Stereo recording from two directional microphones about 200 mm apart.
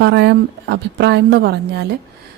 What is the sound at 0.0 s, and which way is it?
A woman's voice, 60° right (ahead or behind).